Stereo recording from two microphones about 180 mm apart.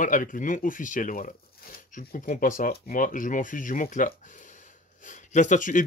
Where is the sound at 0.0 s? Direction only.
45° left (ahead or behind).